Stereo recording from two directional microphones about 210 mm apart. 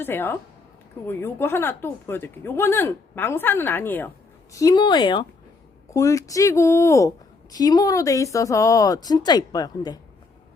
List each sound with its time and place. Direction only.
0.0 s speech: 10° left (ahead or behind)